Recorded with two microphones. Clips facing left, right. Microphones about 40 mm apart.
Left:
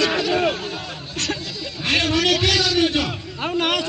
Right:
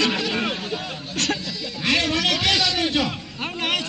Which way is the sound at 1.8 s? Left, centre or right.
Left.